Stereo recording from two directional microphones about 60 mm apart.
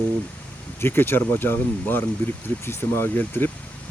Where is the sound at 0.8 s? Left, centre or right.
Left.